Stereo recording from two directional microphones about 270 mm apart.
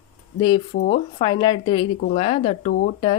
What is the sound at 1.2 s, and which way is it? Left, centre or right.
A woman's voice, centre.